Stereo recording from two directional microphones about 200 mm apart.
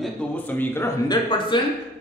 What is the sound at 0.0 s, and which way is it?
A man's voice, 10° left (ahead or behind).